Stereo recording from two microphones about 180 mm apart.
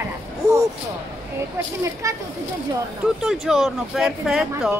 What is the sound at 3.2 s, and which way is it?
Speech, centre (ahead or behind).